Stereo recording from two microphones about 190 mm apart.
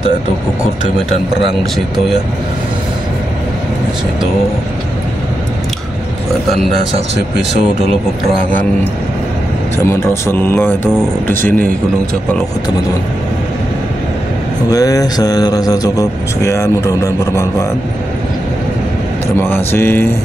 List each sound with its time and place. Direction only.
9.8 s speech: 10° left (ahead or behind)
14.7 s speech: 20° left (ahead or behind)
19.4 s speech: 10° left (ahead or behind)